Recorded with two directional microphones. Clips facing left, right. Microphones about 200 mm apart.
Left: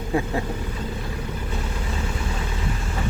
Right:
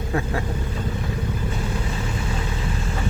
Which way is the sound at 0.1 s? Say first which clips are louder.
Left 2 dB; 15° left (ahead or behind).